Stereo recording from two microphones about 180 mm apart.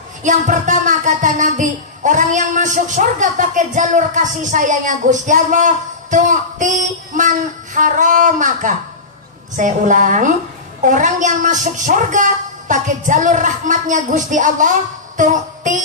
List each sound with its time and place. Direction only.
0.2 s speech: 45° right (ahead or behind)